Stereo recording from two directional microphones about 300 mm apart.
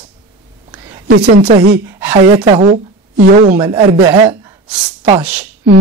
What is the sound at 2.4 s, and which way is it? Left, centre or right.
Speech, right.